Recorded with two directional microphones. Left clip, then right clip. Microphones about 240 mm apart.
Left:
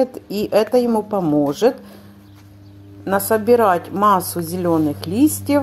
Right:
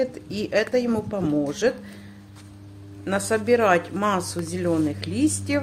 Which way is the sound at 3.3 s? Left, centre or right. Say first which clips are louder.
Left 5 dB; centre.